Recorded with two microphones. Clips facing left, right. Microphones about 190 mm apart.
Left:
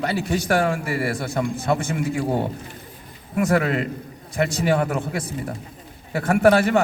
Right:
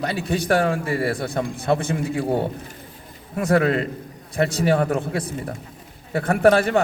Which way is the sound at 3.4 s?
35° right (ahead or behind).